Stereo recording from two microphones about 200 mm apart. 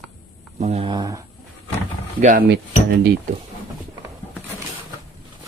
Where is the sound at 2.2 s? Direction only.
40° right (ahead or behind).